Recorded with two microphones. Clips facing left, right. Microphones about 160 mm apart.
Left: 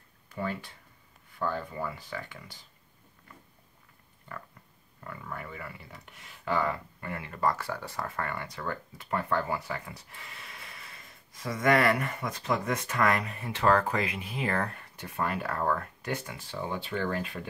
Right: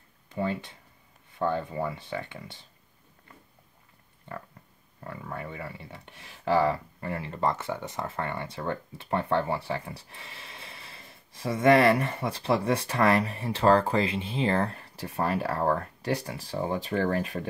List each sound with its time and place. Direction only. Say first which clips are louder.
0.3 s speech: right 4 dB; 20° right (ahead or behind)
5.0 s speech: right 3 dB; 30° right (ahead or behind)